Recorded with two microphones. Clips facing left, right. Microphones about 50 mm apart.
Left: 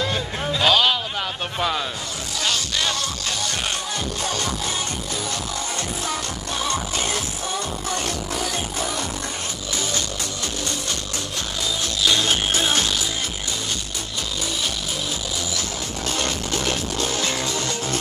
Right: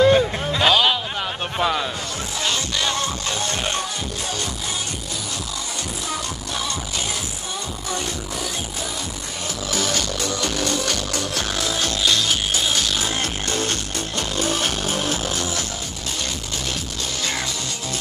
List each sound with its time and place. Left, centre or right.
0.0 s music: centre
1.6 s a man's voice: centre
2.4 s music: right
9.7 s music: right
12.2 s music: left
13.5 s music: right
16.2 s music: left